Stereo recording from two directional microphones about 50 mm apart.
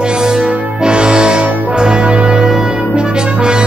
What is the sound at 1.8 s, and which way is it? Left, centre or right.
Brass instrument, centre.